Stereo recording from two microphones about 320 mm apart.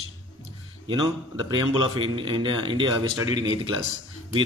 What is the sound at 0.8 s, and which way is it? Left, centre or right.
Speech, centre.